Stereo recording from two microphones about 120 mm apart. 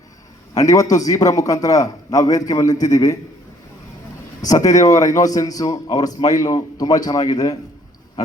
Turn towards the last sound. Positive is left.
turn(degrees=30)  # may be behind; listen again after turning